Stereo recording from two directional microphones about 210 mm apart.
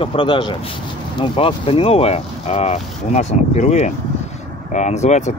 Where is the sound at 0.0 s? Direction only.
25° left (ahead or behind).